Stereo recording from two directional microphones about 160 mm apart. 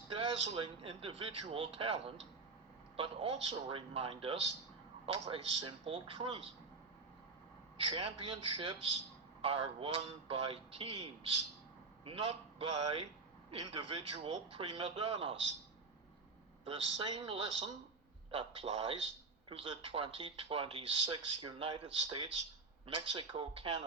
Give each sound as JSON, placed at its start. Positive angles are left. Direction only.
{"t": 0.1, "sound": "speech", "side_deg": -35}
{"t": 7.9, "sound": "speech", "side_deg": -35}
{"t": 16.6, "sound": "speech", "side_deg": -35}